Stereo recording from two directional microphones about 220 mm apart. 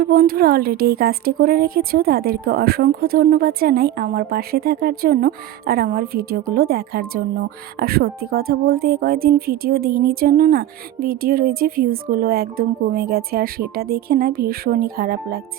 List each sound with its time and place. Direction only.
0.0 s speech: 40° right (ahead or behind)